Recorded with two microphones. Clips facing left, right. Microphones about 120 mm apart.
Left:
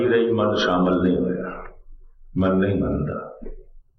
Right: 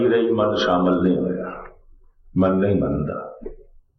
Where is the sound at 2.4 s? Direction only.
40° right (ahead or behind).